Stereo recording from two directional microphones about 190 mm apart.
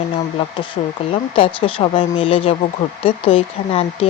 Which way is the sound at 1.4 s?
30° left (ahead or behind).